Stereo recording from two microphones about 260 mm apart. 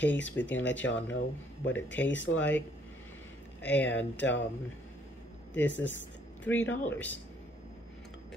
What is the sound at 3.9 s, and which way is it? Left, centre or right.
Speech, left.